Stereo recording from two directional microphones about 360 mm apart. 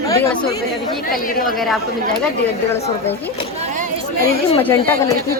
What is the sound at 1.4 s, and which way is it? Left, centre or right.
Speech, centre.